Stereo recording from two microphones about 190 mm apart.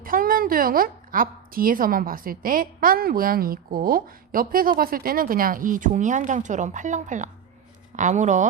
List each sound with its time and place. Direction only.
0.0 s a woman's voice: 50° right (ahead or behind)